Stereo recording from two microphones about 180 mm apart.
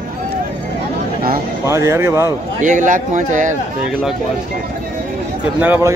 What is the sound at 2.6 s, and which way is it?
Speech, 45° right (ahead or behind).